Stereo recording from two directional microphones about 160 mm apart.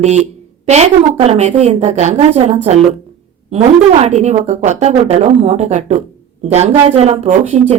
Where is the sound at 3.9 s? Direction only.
45° right (ahead or behind).